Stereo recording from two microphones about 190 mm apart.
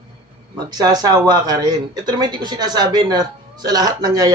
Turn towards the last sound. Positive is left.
turn(degrees=-20)  # may be behind; listen again after turning